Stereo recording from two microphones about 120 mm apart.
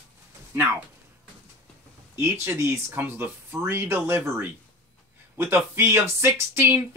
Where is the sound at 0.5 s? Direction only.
20° right (ahead or behind).